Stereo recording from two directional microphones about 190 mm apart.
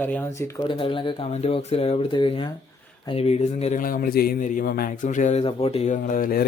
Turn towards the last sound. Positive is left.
turn(degrees=50)  # may be behind; listen again after turning